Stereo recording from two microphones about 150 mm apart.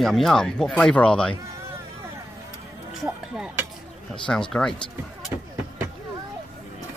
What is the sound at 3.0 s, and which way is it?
Speech, 5° right (ahead or behind).